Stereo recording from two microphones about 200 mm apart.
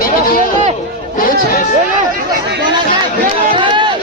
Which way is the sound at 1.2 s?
45° left (ahead or behind).